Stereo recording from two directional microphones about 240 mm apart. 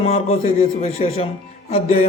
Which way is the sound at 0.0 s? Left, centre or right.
Left.